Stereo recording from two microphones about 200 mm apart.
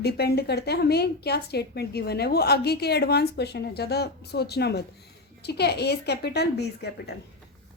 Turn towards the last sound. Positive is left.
turn(degrees=55)  # may be behind; listen again after turning